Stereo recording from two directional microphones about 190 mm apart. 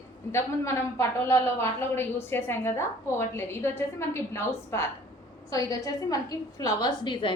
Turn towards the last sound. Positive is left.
turn(degrees=25)  # may be behind; listen again after turning